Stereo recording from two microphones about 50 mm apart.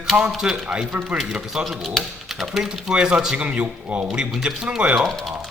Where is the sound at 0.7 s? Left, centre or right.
Centre.